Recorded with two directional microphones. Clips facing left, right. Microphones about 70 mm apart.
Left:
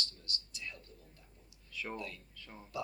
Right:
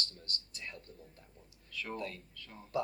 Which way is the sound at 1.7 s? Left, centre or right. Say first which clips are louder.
Even; centre.